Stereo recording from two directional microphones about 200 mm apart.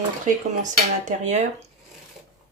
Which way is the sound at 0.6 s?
35° right (ahead or behind).